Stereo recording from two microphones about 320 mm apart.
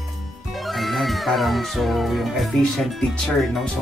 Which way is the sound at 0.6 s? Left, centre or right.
Centre.